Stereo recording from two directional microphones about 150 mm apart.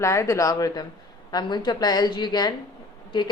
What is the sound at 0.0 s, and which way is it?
A woman's voice, 20° left (ahead or behind).